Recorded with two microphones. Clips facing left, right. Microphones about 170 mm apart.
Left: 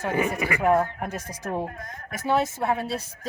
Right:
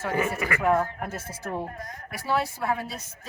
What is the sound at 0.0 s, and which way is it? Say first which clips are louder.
Speech: left 2 dB; 15° left (ahead or behind).